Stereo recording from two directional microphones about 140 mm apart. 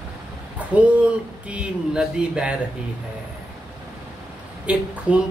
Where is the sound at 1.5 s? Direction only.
5° right (ahead or behind).